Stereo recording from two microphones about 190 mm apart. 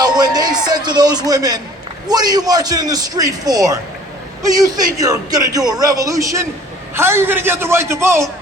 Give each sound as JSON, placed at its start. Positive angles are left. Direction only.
{"t": 0.0, "sound": "music", "side_deg": -20}
{"t": 2.0, "sound": "a man's voice", "side_deg": -20}
{"t": 4.9, "sound": "a man's voice", "side_deg": -20}